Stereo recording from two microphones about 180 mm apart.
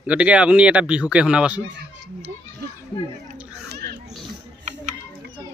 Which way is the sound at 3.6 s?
60° right (ahead or behind).